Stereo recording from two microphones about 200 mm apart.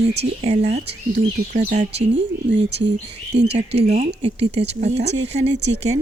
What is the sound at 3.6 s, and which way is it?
Speech, 30° right (ahead or behind).